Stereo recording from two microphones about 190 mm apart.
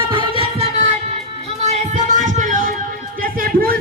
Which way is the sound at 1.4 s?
35° right (ahead or behind).